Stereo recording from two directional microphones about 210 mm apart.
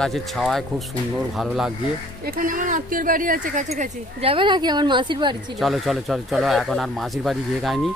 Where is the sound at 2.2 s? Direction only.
45° right (ahead or behind); by 5.5 s 20° right (ahead or behind).